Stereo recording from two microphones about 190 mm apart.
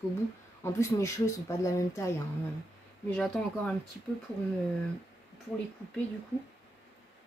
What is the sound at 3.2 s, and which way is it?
Speech, 5° left (ahead or behind).